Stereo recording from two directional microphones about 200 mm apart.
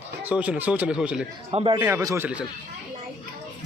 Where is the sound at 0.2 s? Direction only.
5° right (ahead or behind).